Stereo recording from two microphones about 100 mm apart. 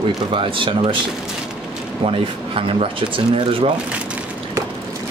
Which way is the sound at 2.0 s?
65° right (ahead or behind).